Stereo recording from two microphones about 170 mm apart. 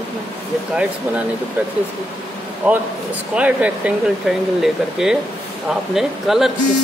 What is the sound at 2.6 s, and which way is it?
Speech, 5° right (ahead or behind).